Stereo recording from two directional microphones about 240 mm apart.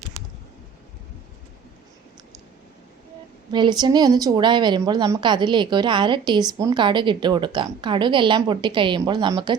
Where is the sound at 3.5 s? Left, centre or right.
Centre.